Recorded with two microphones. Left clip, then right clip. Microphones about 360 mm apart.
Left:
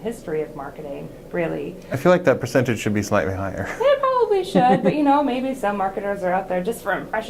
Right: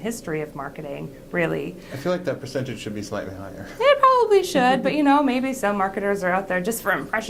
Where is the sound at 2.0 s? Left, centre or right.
Left.